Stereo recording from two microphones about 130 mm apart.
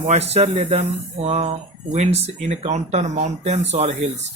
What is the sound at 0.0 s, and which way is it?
Speech, 55° right (ahead or behind).